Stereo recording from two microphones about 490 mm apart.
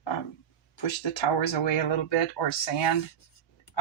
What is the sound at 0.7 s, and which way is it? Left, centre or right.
Speech, left.